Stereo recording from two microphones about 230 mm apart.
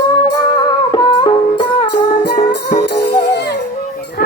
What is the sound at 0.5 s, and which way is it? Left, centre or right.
Music, centre.